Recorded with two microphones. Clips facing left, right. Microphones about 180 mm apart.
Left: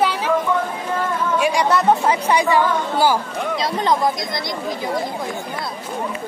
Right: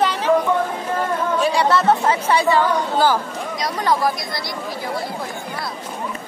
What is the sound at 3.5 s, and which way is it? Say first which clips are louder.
Speech: left 1 dB; 25° left (ahead or behind).